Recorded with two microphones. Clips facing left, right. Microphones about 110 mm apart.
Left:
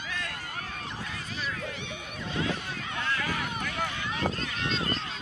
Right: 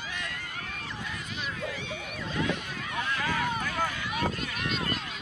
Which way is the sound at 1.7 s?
60° left (ahead or behind).